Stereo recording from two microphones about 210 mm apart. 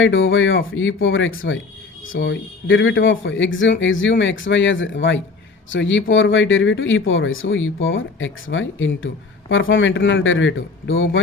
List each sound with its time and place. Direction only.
0.0 s speech: 65° left (ahead or behind)